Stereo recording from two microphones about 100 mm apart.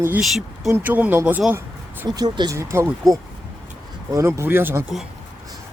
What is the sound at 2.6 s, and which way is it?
Speech, 30° right (ahead or behind).